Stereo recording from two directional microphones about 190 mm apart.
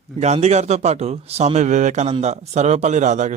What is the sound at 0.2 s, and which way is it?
A man's voice, 35° right (ahead or behind).